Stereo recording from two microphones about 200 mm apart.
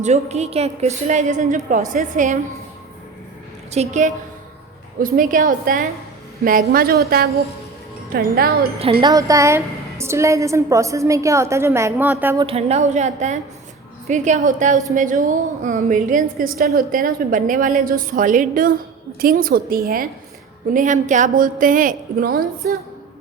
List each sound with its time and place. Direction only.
0.0 s a woman's voice: 35° right (ahead or behind)
3.7 s a woman's voice: 35° right (ahead or behind); by 8.5 s 50° right (ahead or behind)
8.8 s wind chime: 30° right (ahead or behind)
9.1 s a woman's voice: 15° right (ahead or behind)
12.5 s a woman's voice: 30° right (ahead or behind); by 22.8 s 50° right (ahead or behind)